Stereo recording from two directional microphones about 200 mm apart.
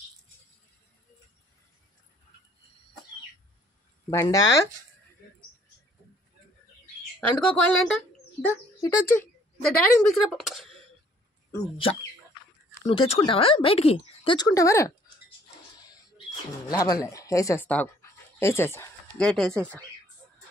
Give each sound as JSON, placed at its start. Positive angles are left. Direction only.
{"t": 4.1, "sound": "speech", "side_deg": 15}
{"t": 7.2, "sound": "speech", "side_deg": 5}
{"t": 12.8, "sound": "speech", "side_deg": 25}
{"t": 16.6, "sound": "speech", "side_deg": 20}